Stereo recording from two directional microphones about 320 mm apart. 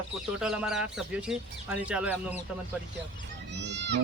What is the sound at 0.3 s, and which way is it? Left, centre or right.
Speech, centre.